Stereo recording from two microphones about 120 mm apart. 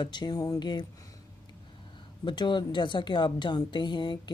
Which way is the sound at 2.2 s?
40° left (ahead or behind).